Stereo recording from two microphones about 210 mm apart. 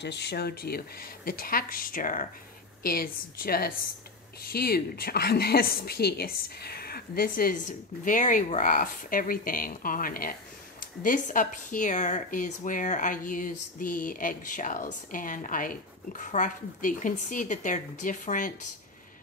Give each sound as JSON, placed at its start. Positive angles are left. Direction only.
{"t": 0.0, "sound": "a woman's voice", "side_deg": 55}